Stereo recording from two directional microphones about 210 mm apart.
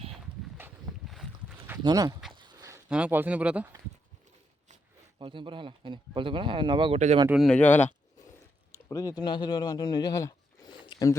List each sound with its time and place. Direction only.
0.1 s a sound: 5° right (ahead or behind)
1.8 s speech: 20° right (ahead or behind)
2.3 s a sound: 20° right (ahead or behind)
2.9 s speech: 5° right (ahead or behind)
5.2 s speech: 25° right (ahead or behind)
7.3 s speech: centre (ahead or behind)
8.9 s speech: 15° left (ahead or behind)